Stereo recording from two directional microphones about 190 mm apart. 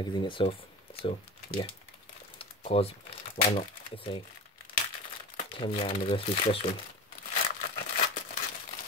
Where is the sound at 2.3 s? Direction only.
30° left (ahead or behind).